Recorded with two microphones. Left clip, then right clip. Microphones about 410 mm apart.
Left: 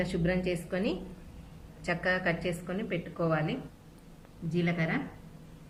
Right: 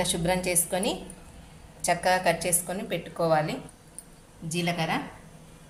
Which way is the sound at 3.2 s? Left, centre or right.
Centre.